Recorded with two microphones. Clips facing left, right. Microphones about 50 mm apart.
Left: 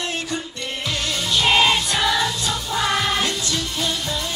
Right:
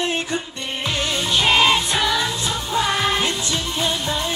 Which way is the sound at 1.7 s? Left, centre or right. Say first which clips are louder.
Right 1 dB; right.